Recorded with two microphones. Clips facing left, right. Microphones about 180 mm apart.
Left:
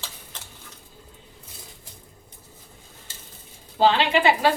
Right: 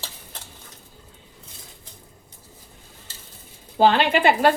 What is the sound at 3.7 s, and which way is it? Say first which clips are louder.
Speech: right 2 dB; 50° right (ahead or behind).